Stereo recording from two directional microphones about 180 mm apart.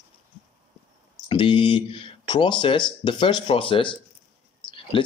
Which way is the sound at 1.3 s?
30° left (ahead or behind).